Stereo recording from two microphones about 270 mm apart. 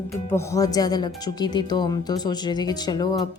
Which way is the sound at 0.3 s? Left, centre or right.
Centre.